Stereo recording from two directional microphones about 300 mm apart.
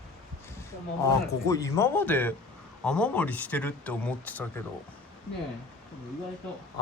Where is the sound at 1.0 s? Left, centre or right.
Centre.